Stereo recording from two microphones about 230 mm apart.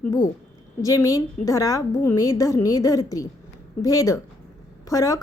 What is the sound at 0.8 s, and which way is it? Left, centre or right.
A woman's voice, centre.